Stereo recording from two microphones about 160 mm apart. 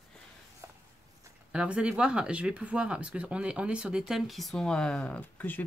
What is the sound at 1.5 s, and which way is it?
Speech, 5° right (ahead or behind).